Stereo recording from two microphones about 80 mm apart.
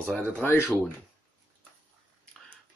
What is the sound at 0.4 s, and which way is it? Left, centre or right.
Speech, left.